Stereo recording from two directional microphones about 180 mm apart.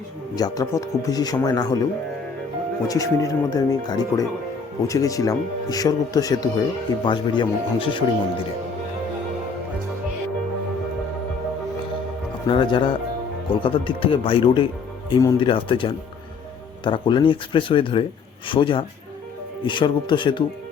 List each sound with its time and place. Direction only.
0.3 s speech: 20° left (ahead or behind)
2.8 s speech: 20° left (ahead or behind)
12.5 s speech: 25° left (ahead or behind)